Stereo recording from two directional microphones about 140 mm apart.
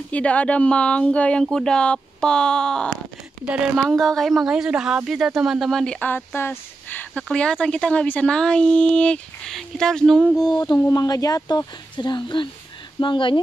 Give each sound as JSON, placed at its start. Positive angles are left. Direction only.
{"t": 0.1, "sound": "speech", "side_deg": 10}
{"t": 3.4, "sound": "speech", "side_deg": -5}
{"t": 10.3, "sound": "speech", "side_deg": 25}